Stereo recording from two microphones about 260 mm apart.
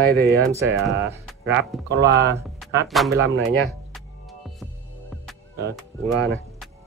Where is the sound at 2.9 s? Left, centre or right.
Centre.